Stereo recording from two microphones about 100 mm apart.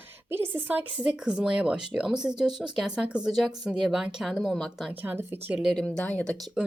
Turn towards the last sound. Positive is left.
turn(degrees=15)  # may be behind; listen again after turning